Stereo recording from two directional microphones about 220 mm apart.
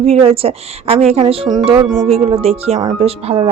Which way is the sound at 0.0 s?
25° right (ahead or behind).